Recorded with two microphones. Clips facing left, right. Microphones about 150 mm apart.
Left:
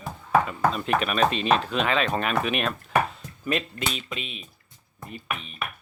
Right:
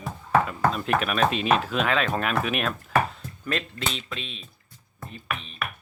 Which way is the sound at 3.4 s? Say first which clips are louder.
Left 2 dB; 5° left (ahead or behind).